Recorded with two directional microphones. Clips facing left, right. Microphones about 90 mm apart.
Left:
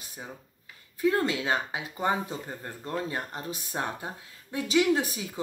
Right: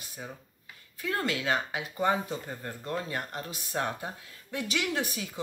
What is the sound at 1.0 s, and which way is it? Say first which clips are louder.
Speech: left 5 dB; 20° left (ahead or behind).